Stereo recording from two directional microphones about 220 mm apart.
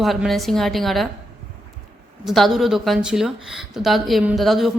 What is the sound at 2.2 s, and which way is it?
Speech, centre (ahead or behind).